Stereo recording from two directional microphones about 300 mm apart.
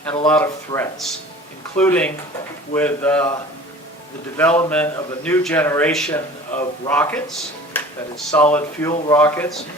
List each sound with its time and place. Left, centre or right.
0.3 s speech: centre
4.4 s speech: centre